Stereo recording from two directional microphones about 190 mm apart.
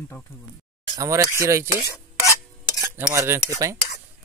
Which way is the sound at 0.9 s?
15° right (ahead or behind).